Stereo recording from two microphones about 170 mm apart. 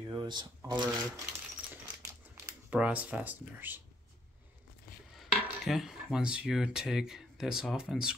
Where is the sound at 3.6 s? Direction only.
10° right (ahead or behind).